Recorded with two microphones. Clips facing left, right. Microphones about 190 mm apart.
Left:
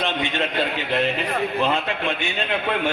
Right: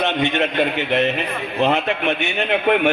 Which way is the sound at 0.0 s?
20° right (ahead or behind).